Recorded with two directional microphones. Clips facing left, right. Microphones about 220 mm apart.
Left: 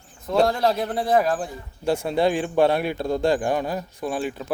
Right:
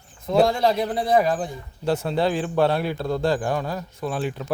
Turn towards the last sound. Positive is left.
turn(degrees=0)  # may be behind; listen again after turning